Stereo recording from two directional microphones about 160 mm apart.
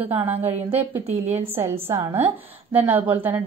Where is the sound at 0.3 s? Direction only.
40° right (ahead or behind).